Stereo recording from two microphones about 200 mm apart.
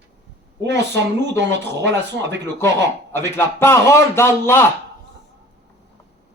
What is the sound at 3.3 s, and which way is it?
Speech, 10° left (ahead or behind).